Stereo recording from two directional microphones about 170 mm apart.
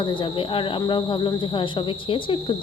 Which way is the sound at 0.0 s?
30° left (ahead or behind).